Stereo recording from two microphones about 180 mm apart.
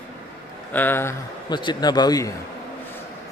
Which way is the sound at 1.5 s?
25° left (ahead or behind).